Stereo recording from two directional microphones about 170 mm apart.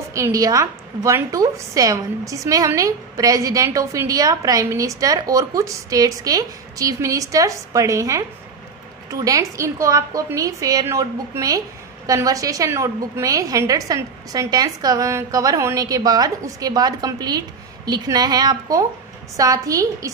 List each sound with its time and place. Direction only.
0.1 s a woman's voice: 20° right (ahead or behind)